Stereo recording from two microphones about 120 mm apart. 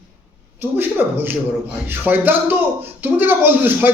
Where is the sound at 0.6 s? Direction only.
15° right (ahead or behind).